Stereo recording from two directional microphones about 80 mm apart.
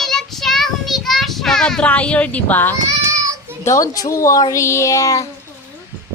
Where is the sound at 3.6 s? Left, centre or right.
Left.